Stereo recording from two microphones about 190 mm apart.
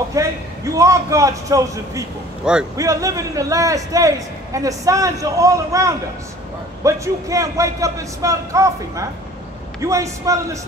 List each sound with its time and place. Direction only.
0.2 s a man's voice: 15° right (ahead or behind)